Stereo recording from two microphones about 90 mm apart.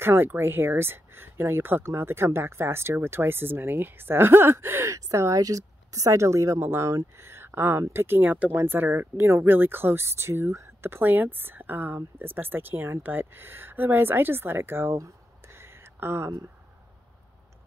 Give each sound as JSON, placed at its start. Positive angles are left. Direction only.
{"t": 0.0, "sound": "speech", "side_deg": -25}